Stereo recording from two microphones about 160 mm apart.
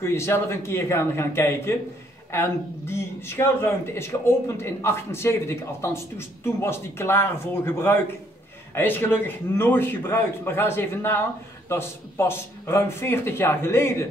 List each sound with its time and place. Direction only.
0.0 s a man's voice: 15° left (ahead or behind)